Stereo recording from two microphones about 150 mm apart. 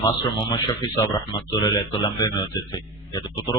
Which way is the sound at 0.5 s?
25° left (ahead or behind).